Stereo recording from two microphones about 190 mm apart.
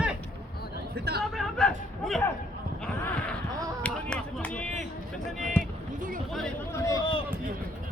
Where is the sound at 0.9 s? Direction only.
55° right (ahead or behind).